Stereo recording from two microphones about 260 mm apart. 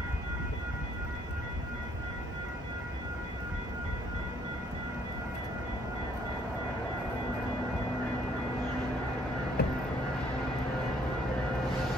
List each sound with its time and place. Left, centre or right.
9.6 s vehicle: left